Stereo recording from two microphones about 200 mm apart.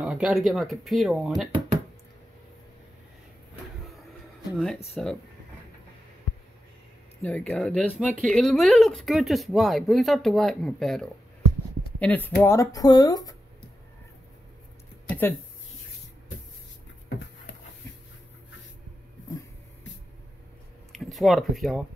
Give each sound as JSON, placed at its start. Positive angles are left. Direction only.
{"t": 0.0, "sound": "speech", "side_deg": -5}
{"t": 5.0, "sound": "speech", "side_deg": 5}
{"t": 7.2, "sound": "speech", "side_deg": 5}
{"t": 15.0, "sound": "a sound", "side_deg": 10}
{"t": 20.9, "sound": "speech", "side_deg": 0}